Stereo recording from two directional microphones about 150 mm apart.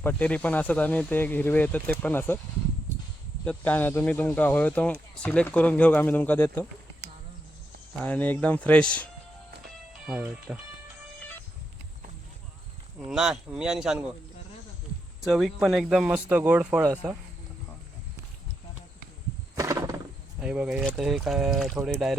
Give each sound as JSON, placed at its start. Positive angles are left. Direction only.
{"t": 0.0, "sound": "speech", "side_deg": 10}
{"t": 3.4, "sound": "speech", "side_deg": 10}
{"t": 7.9, "sound": "speech", "side_deg": 10}
{"t": 10.1, "sound": "speech", "side_deg": -10}
{"t": 13.1, "sound": "speech", "side_deg": -5}
{"t": 15.2, "sound": "speech", "side_deg": -5}
{"t": 19.5, "sound": "wild animals", "side_deg": -20}
{"t": 20.4, "sound": "speech", "side_deg": -5}